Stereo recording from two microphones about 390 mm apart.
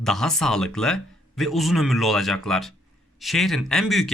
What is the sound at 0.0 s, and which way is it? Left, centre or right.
Speech, centre.